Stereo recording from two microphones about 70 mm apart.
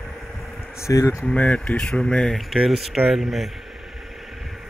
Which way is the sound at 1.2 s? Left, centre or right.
Centre.